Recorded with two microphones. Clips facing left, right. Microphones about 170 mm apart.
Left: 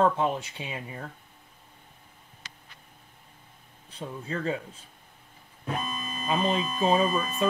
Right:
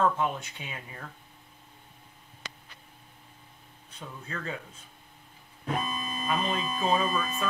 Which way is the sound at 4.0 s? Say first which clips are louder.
Left 6 dB; 30° left (ahead or behind).